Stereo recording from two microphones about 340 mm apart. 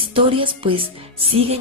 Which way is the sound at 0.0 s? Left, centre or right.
Centre.